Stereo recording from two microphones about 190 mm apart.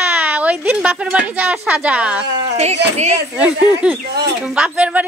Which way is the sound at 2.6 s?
35° right (ahead or behind).